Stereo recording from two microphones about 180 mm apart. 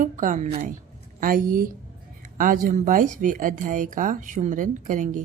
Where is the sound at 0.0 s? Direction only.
45° right (ahead or behind).